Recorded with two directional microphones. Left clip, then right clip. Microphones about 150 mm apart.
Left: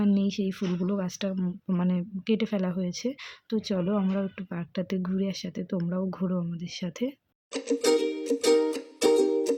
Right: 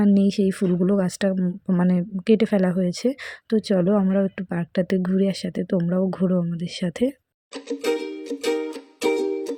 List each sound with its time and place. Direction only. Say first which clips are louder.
0.0 s speech: right 8 dB; 45° right (ahead or behind)
1.4 s speech: right 7 dB; 30° right (ahead or behind)
1.9 s a woman's voice: right 10 dB; 45° right (ahead or behind)
7.5 s music: left 1 dB; 10° left (ahead or behind)